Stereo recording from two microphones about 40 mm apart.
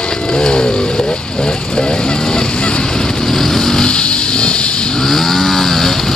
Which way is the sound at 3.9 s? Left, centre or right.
Left.